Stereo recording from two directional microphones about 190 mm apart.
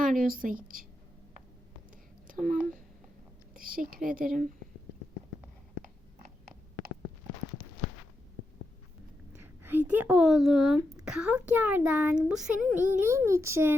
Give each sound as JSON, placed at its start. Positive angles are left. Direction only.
{"t": 0.0, "sound": "speech", "side_deg": -45}
{"t": 2.2, "sound": "a sound", "side_deg": -45}
{"t": 3.5, "sound": "speech", "side_deg": -45}
{"t": 9.4, "sound": "speech", "side_deg": -10}
{"t": 10.8, "sound": "speech", "side_deg": -15}
{"t": 11.0, "sound": "a child's voice", "side_deg": -5}